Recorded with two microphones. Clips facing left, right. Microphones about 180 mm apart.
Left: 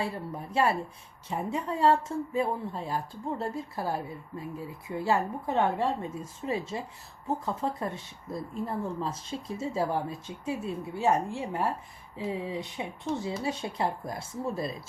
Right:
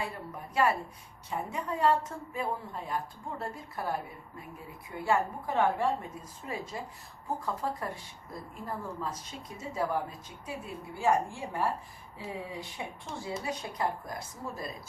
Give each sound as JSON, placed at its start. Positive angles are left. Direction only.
{"t": 0.5, "sound": "speech", "side_deg": 30}